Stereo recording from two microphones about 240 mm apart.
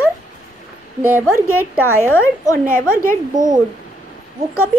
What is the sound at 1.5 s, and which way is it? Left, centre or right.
Speech, right.